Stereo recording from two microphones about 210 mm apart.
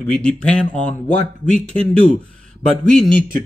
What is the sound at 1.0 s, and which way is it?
Speech, 35° left (ahead or behind).